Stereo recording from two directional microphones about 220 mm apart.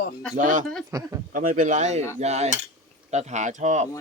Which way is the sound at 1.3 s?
35° right (ahead or behind).